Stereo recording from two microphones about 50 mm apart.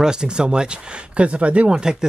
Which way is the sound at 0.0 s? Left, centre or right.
Centre.